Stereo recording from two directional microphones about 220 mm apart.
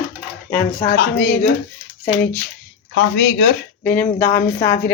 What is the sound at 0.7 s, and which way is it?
Speech, 40° left (ahead or behind).